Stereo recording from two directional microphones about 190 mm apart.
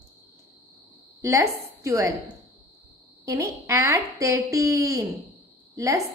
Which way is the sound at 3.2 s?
15° right (ahead or behind).